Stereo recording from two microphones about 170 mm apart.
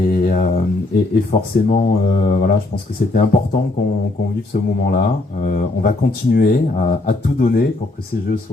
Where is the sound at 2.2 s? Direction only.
50° left (ahead or behind).